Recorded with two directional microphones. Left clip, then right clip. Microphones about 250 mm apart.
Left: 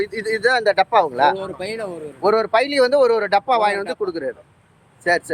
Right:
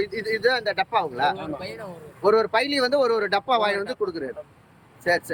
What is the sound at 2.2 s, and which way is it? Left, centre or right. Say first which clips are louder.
Speech: left 3 dB; centre.